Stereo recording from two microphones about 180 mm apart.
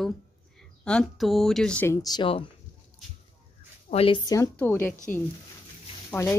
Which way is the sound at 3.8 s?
30° left (ahead or behind).